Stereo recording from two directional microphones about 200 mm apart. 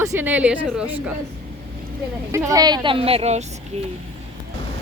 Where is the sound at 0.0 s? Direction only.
15° right (ahead or behind).